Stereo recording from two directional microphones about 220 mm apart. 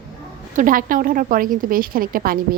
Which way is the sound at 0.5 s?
35° right (ahead or behind).